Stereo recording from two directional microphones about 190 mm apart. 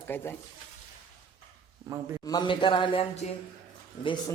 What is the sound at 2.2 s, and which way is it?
Speech, 20° left (ahead or behind).